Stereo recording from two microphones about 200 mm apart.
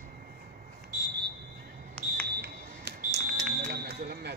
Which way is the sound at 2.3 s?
55° right (ahead or behind).